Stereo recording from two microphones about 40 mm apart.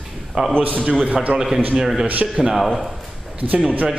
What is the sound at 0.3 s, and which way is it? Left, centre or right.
Speech, centre.